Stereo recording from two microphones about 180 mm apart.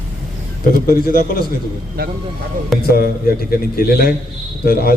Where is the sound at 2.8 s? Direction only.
55° left (ahead or behind).